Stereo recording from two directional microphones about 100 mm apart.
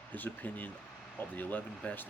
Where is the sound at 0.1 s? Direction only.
15° left (ahead or behind).